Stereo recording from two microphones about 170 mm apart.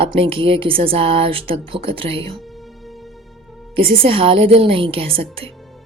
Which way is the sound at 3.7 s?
30° right (ahead or behind).